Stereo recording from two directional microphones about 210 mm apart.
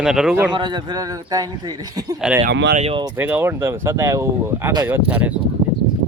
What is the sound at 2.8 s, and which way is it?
Speech, 25° right (ahead or behind).